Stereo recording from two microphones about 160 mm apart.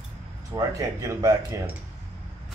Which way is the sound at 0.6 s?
20° right (ahead or behind).